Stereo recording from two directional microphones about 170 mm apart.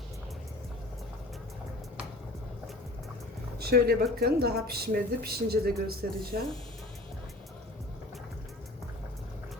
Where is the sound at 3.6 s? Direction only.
65° right (ahead or behind).